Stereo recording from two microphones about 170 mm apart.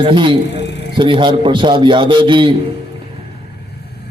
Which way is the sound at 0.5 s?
85° left.